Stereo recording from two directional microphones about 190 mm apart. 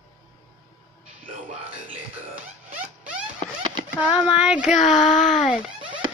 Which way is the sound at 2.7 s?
5° right (ahead or behind).